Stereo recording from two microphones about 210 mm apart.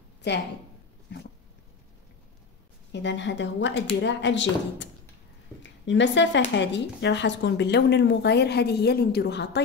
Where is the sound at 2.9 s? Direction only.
60° left (ahead or behind).